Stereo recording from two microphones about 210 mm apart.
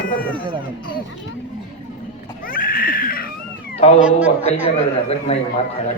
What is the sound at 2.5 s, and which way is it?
Cat, 40° left (ahead or behind).